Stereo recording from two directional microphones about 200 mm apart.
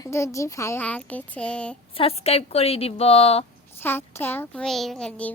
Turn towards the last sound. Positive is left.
turn(degrees=5)  # may be behind; listen again after turning